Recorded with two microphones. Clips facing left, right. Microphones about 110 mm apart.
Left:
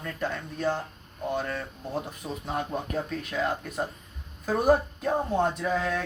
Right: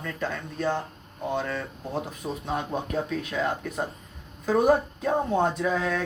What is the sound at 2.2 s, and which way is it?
Speech, 30° right (ahead or behind).